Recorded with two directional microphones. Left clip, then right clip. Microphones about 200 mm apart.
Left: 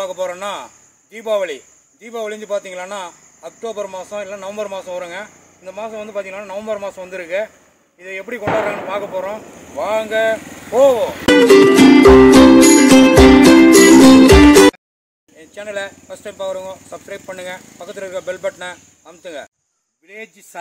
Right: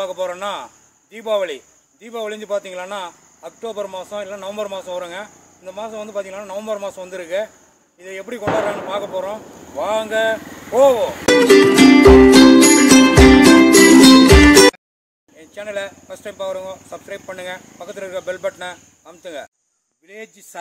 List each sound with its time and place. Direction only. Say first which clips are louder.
0.0 s speech: left 1 dB; centre (ahead or behind)
10.4 s vehicle: left 1 dB; 50° left (ahead or behind)
10.7 s speech: left 1 dB; centre (ahead or behind)
11.2 s music: left 2 dB; centre (ahead or behind)
15.3 s speech: left 1 dB; centre (ahead or behind)